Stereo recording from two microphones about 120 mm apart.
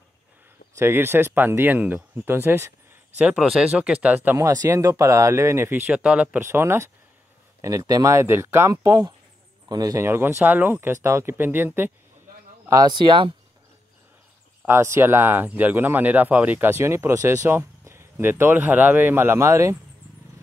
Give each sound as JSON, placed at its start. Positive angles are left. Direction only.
{"t": 0.7, "sound": "speech", "side_deg": -20}
{"t": 4.4, "sound": "speech", "side_deg": -30}
{"t": 12.6, "sound": "speech", "side_deg": -30}
{"t": 14.7, "sound": "speech", "side_deg": -20}